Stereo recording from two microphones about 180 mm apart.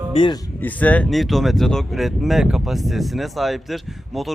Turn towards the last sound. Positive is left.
turn(degrees=0)  # may be behind; listen again after turning